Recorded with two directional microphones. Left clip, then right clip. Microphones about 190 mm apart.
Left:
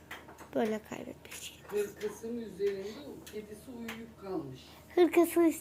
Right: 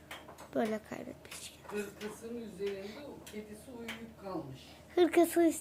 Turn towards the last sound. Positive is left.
turn(degrees=-5)  # may be behind; listen again after turning